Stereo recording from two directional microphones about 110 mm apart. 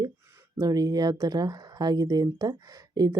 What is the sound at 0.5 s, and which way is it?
Speech, 30° right (ahead or behind).